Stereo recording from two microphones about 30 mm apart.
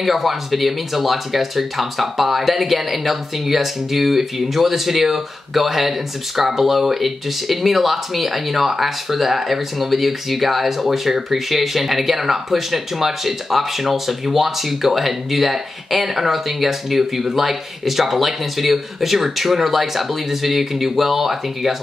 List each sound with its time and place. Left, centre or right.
0.0 s speech: centre